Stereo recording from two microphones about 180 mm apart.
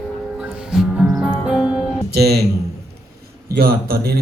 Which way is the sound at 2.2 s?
60° right (ahead or behind).